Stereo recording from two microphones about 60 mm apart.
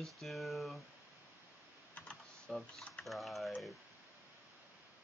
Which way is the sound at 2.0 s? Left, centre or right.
Centre.